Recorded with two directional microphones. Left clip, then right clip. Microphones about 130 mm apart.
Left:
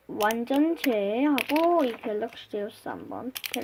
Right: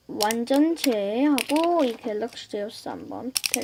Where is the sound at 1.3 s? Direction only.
5° left (ahead or behind).